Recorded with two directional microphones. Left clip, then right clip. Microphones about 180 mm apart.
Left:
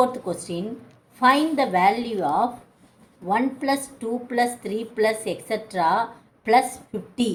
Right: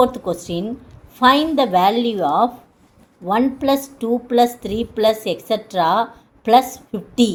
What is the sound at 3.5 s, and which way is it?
Speech, 35° right (ahead or behind).